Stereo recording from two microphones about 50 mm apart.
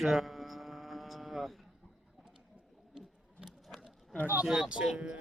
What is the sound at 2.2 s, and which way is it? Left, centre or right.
Bird, centre.